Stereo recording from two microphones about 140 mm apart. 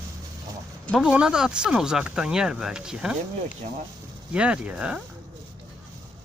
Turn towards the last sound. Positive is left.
turn(degrees=-5)  # may be behind; listen again after turning